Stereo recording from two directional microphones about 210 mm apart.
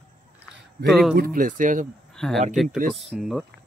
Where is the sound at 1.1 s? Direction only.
45° right (ahead or behind).